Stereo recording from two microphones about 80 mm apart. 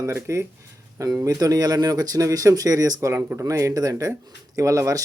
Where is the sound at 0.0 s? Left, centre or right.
Right.